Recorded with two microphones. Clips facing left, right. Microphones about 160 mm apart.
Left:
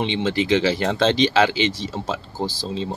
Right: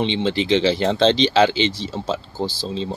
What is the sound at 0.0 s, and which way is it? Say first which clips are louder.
Speech: right 1 dB; 25° right (ahead or behind).